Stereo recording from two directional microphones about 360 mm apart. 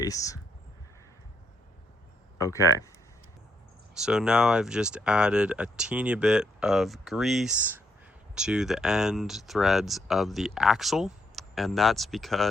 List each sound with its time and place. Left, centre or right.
0.0 s speech: centre
2.4 s speech: centre
3.9 s speech: centre